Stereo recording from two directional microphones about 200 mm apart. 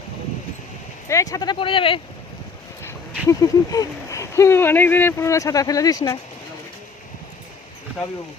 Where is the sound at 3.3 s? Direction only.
15° left (ahead or behind).